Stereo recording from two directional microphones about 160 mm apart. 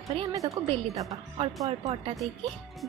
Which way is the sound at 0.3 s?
20° right (ahead or behind).